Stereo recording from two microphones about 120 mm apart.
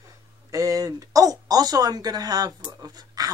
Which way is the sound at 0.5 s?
30° right (ahead or behind).